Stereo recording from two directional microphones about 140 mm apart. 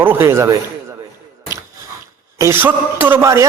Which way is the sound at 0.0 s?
15° right (ahead or behind).